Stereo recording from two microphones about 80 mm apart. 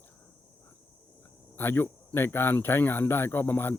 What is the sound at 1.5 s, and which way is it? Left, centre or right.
Speech, left.